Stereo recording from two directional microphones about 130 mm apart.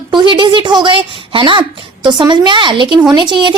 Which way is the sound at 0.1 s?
35° right (ahead or behind).